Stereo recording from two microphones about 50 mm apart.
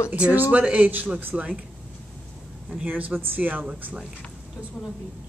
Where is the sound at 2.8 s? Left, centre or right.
Right.